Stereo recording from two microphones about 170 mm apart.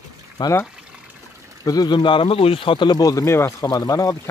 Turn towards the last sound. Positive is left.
turn(degrees=20)  # may be behind; listen again after turning